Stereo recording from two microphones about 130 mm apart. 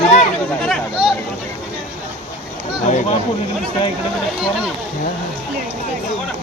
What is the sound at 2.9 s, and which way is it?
Speech, 65° left (ahead or behind).